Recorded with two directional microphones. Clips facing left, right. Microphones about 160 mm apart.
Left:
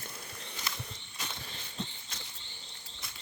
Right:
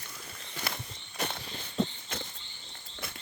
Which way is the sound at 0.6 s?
60° right (ahead or behind).